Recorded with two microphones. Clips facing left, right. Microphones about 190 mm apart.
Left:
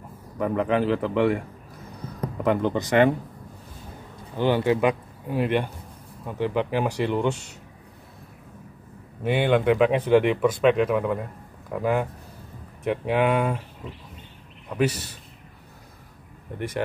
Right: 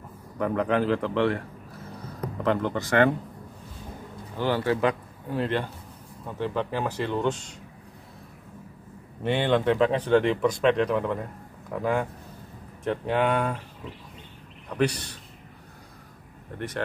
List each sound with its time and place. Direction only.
0.4 s speech: 5° left (ahead or behind)
2.4 s speech: 15° left (ahead or behind)
4.4 s speech: 20° left (ahead or behind)
9.2 s speech: 10° left (ahead or behind)
14.8 s speech: 5° left (ahead or behind)
16.5 s speech: 15° left (ahead or behind)